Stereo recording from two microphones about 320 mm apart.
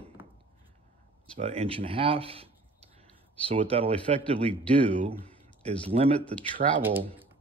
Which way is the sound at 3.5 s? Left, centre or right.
Centre.